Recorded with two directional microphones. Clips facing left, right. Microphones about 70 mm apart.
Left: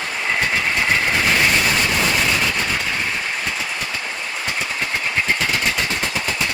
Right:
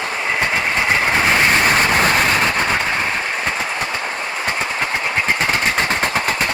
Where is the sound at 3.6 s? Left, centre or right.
Right.